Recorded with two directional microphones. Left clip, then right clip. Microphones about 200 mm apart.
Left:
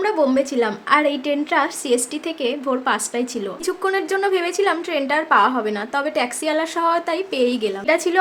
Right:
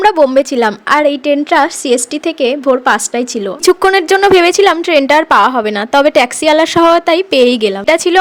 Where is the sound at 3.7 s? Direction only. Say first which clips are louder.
Right 13 dB; 45° right (ahead or behind).